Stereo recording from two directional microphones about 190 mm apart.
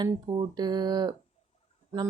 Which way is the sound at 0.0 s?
20° right (ahead or behind).